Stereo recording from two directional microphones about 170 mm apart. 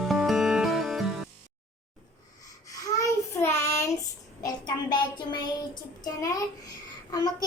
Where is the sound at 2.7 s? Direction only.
20° left (ahead or behind).